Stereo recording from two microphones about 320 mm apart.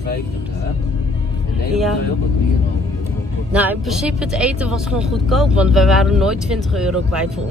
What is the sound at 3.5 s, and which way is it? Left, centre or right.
Speech, centre.